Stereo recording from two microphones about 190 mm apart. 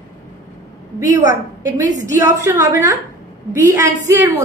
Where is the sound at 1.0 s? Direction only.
15° right (ahead or behind).